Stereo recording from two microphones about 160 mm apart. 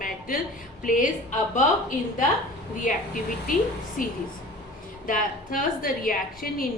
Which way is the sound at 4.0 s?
60° left (ahead or behind).